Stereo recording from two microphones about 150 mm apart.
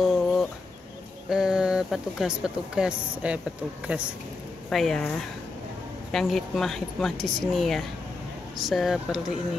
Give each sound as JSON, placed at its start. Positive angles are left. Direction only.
{"t": 0.0, "sound": "chicken", "side_deg": -5}
{"t": 1.3, "sound": "speech", "side_deg": -5}